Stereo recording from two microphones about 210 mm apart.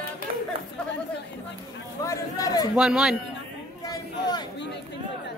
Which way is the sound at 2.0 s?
15° left (ahead or behind).